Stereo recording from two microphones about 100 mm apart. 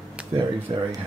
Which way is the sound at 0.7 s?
55° right (ahead or behind).